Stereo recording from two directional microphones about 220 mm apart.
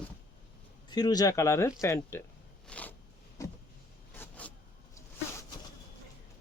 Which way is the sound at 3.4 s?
15° left (ahead or behind).